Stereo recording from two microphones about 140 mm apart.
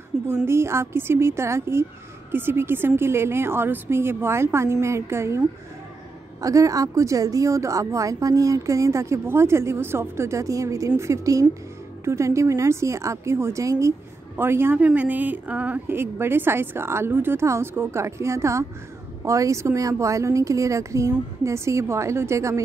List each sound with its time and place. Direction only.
0.1 s a woman's voice: 5° right (ahead or behind)
0.5 s a woman's voice: 20° right (ahead or behind)
6.4 s a woman's voice: 25° right (ahead or behind)